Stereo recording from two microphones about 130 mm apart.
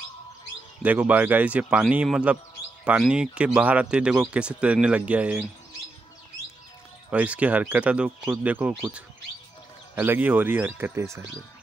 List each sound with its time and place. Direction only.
0.8 s speech: 10° right (ahead or behind)
7.1 s speech: 10° right (ahead or behind)
9.9 s speech: 15° right (ahead or behind)